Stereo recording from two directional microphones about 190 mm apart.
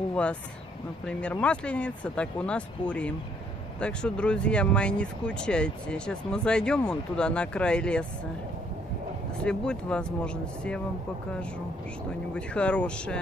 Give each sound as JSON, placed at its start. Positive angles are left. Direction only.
{"t": 0.1, "sound": "speech", "side_deg": 5}
{"t": 9.4, "sound": "speech", "side_deg": 5}
{"t": 12.4, "sound": "speech", "side_deg": 5}